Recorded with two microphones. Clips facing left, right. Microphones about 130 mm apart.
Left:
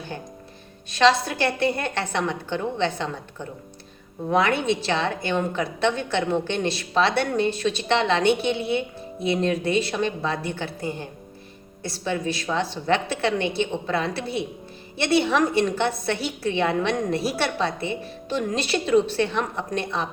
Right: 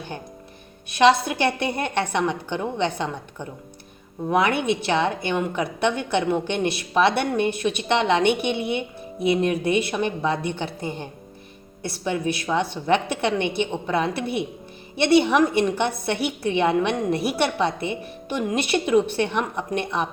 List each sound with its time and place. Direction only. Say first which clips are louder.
0.9 s a woman's voice: right 2 dB; 15° right (ahead or behind)
4.3 s a woman's voice: even; 15° right (ahead or behind)